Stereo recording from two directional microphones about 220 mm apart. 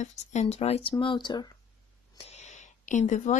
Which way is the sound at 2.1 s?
30° left (ahead or behind).